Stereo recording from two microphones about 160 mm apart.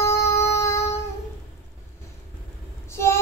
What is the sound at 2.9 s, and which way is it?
Vehicle, 15° left (ahead or behind).